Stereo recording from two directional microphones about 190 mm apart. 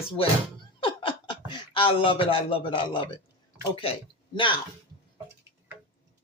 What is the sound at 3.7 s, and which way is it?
Speech, 30° left (ahead or behind).